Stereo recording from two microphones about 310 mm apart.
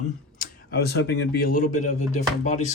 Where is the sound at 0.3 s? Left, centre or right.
Left.